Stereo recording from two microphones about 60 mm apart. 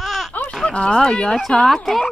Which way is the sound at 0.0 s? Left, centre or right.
Centre.